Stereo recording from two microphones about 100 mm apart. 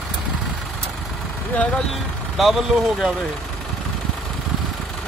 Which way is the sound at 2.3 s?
5° right (ahead or behind).